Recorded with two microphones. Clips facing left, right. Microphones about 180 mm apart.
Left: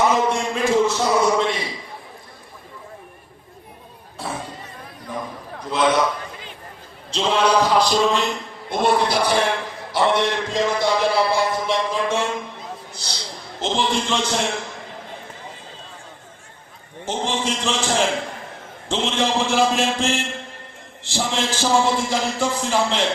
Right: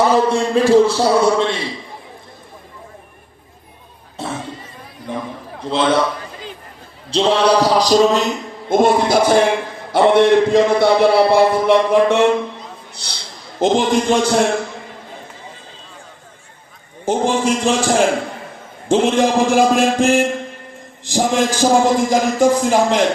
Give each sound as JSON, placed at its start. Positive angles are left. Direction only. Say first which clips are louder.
{"t": 0.0, "sound": "a man's voice", "louder": "right 5 dB", "side_deg": -35}
{"t": 4.2, "sound": "music", "louder": "right 4 dB", "side_deg": -25}
{"t": 5.0, "sound": "a man's voice", "louder": "right 4 dB", "side_deg": -25}
{"t": 7.1, "sound": "a man's voice", "louder": "right 5 dB", "side_deg": -35}
{"t": 12.9, "sound": "a sound", "louder": "left 2 dB", "side_deg": -60}
{"t": 13.7, "sound": "a man's voice", "louder": "right 7 dB", "side_deg": -45}
{"t": 17.2, "sound": "a man's voice", "louder": "right 7 dB", "side_deg": -10}
{"t": 21.1, "sound": "a man's voice", "louder": "right 7 dB", "side_deg": -45}